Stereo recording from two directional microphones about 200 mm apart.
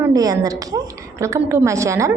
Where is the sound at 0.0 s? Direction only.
15° right (ahead or behind).